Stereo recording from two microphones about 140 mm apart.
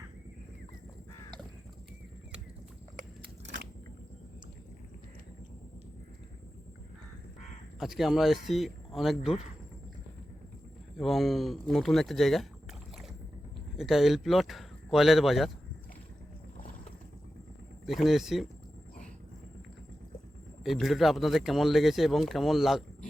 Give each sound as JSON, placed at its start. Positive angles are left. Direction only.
{"t": 7.8, "sound": "speech", "side_deg": 0}
{"t": 10.9, "sound": "speech", "side_deg": 0}
{"t": 13.7, "sound": "speech", "side_deg": 0}
{"t": 16.6, "sound": "boat", "side_deg": 75}
{"t": 17.8, "sound": "speech", "side_deg": 0}
{"t": 20.7, "sound": "speech", "side_deg": 0}